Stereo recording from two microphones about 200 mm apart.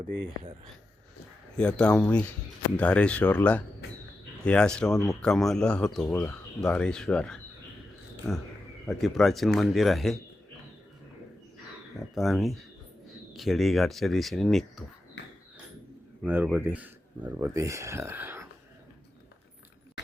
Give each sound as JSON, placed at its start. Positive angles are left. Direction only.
{"t": 1.5, "sound": "speech", "side_deg": 5}
{"t": 8.9, "sound": "speech", "side_deg": 0}
{"t": 12.1, "sound": "speech", "side_deg": 0}
{"t": 15.2, "sound": "a sound", "side_deg": 65}
{"t": 16.2, "sound": "speech", "side_deg": -10}